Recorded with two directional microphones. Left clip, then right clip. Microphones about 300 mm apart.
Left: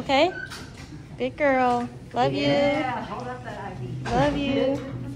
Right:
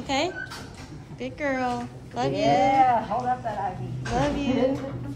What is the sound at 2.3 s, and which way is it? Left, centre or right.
Speech, right.